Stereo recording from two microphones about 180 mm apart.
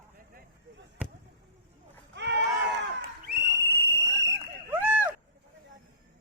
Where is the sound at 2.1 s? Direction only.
75° right (ahead or behind).